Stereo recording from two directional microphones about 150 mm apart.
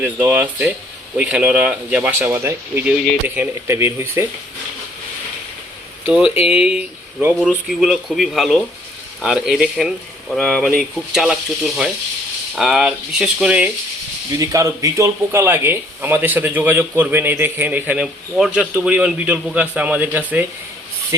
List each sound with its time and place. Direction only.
0.0 s speech: 15° right (ahead or behind)
6.1 s speech: 10° right (ahead or behind)
7.4 s speech: centre (ahead or behind)
14.3 s speech: 20° right (ahead or behind)